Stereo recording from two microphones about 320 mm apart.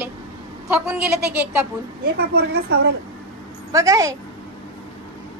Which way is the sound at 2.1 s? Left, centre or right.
Right.